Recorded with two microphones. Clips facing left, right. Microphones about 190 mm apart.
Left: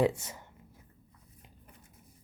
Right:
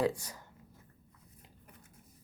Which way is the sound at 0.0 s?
25° left (ahead or behind).